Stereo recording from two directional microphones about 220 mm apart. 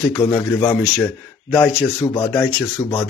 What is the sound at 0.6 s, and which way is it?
Speech, 5° left (ahead or behind).